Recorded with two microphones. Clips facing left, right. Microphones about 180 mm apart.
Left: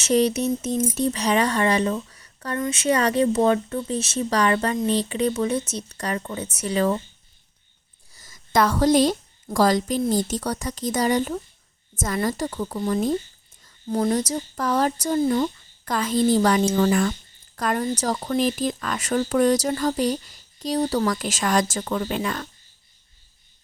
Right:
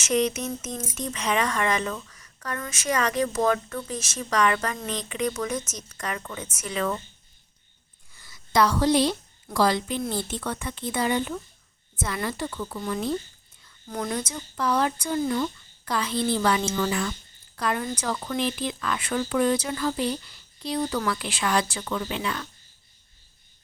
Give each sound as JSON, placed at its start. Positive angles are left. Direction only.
{"t": 0.0, "sound": "speech", "side_deg": 35}
{"t": 8.1, "sound": "a woman's voice", "side_deg": 45}